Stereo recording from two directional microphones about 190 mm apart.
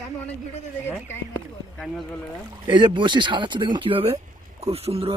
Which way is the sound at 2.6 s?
25° right (ahead or behind).